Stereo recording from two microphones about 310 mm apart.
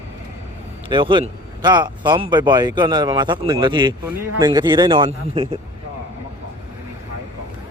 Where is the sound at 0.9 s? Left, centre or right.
Centre.